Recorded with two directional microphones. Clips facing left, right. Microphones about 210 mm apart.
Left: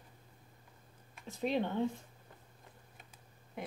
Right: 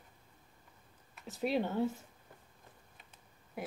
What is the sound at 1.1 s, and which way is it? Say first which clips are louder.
Speech: right 1 dB; 5° right (ahead or behind).